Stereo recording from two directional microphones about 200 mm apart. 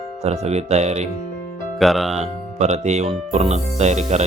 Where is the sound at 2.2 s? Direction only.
35° right (ahead or behind).